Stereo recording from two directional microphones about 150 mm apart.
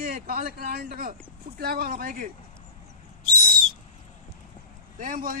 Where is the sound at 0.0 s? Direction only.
75° right (ahead or behind).